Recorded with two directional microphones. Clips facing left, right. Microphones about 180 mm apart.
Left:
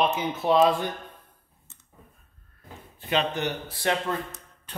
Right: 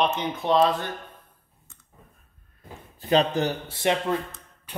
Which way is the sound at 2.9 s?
35° right (ahead or behind).